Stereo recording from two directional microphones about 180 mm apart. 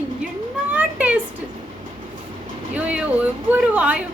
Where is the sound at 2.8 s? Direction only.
5° right (ahead or behind).